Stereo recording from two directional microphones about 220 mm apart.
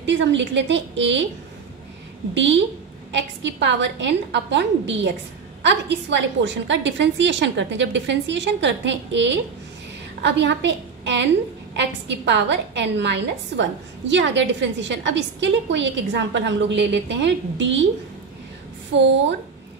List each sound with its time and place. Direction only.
0.0 s a woman's voice: 55° right (ahead or behind)
2.3 s a woman's voice: 55° right (ahead or behind)
18.9 s a woman's voice: 55° right (ahead or behind)